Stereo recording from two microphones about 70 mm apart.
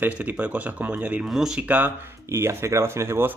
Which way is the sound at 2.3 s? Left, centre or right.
Right.